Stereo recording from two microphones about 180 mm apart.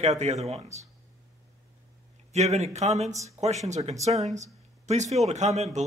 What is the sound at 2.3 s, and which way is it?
Speech, 40° right (ahead or behind).